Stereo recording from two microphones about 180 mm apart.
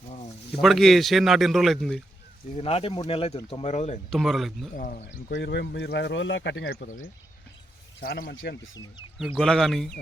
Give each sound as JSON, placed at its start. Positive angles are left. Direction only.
{"t": 0.6, "sound": "speech", "side_deg": 0}
{"t": 2.6, "sound": "speech", "side_deg": 35}
{"t": 4.1, "sound": "speech", "side_deg": 0}
{"t": 4.8, "sound": "speech", "side_deg": 50}
{"t": 5.3, "sound": "speech", "side_deg": 65}
{"t": 8.0, "sound": "a man's voice", "side_deg": 60}
{"t": 9.3, "sound": "speech", "side_deg": 5}